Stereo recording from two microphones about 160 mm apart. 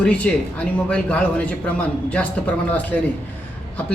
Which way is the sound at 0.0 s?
5° left (ahead or behind).